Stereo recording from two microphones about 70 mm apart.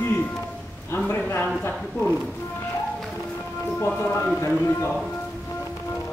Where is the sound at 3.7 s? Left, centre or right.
Left.